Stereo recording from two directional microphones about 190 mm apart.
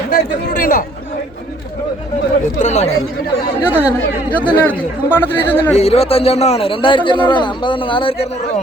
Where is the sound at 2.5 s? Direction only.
35° left (ahead or behind).